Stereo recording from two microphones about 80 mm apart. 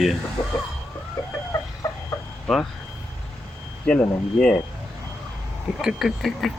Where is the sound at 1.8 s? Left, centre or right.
Left.